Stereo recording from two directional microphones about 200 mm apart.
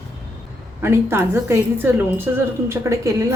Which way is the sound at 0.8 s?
10° right (ahead or behind).